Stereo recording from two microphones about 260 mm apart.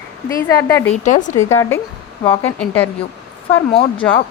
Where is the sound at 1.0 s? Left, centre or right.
Left.